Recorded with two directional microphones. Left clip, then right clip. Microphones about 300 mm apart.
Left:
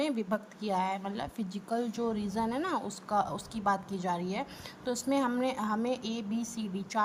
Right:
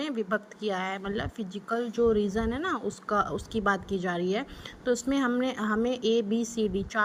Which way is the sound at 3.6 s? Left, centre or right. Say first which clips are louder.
Right 2 dB; centre.